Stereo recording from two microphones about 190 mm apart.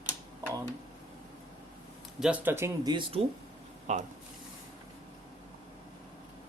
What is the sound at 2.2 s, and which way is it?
Speech, 10° right (ahead or behind).